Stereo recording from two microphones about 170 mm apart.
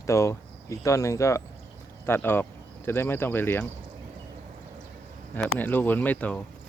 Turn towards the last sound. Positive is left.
turn(degrees=10)  # may be behind; listen again after turning